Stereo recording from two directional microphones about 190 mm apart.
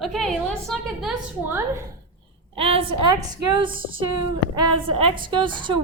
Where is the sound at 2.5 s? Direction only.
30° right (ahead or behind).